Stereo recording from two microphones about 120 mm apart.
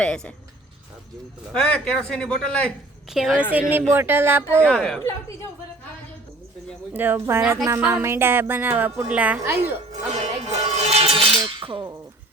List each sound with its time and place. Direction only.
0.0 s a man's voice: 10° left (ahead or behind)
1.5 s a man's voice: 5° left (ahead or behind)
3.1 s a woman's voice: 5° right (ahead or behind)
3.5 s speech: 20° right (ahead or behind)
4.6 s a man's voice: 5° left (ahead or behind)
6.9 s a woman's voice: 15° right (ahead or behind)
9.9 s speech: 70° right (ahead or behind); by 11.9 s 45° right (ahead or behind)